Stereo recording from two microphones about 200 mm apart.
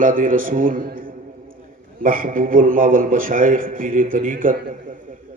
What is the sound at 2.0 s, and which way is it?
A man's voice, 45° right (ahead or behind).